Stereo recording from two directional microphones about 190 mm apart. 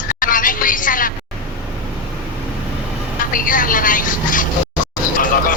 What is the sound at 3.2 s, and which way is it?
Speech, 45° left (ahead or behind).